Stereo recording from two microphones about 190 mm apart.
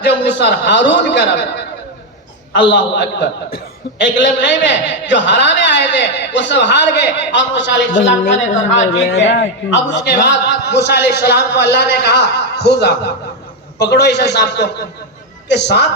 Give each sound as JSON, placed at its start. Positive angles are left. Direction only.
{"t": 0.0, "sound": "a man's voice", "side_deg": 65}
{"t": 2.5, "sound": "a man's voice", "side_deg": 70}
{"t": 9.1, "sound": "a man's voice", "side_deg": 70}